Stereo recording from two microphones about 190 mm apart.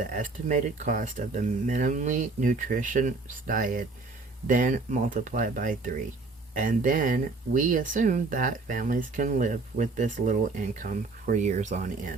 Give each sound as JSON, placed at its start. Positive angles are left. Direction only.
{"t": 0.0, "sound": "speech", "side_deg": -45}